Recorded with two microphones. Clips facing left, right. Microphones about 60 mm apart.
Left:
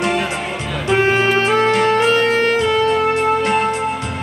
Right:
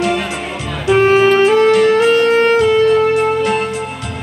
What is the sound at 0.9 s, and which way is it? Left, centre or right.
Music, centre.